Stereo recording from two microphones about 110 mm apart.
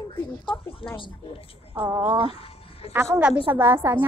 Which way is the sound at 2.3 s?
60° left (ahead or behind).